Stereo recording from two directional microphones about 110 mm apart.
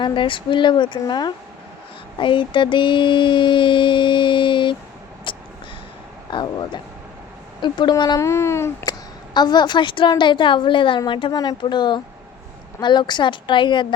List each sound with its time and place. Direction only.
0.0 s child singing: 45° left (ahead or behind)
5.3 s a sound: 50° left (ahead or behind)
6.3 s child singing: 45° left (ahead or behind)
8.2 s speech: 25° left (ahead or behind)
8.8 s a woman's voice: 40° left (ahead or behind)
11.6 s child singing: 45° left (ahead or behind)